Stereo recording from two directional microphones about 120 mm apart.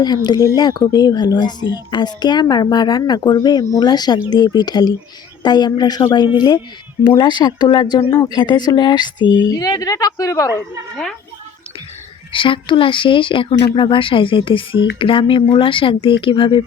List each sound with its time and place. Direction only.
0.0 s a woman's voice: 35° left (ahead or behind)
12.3 s a woman's voice: 45° left (ahead or behind)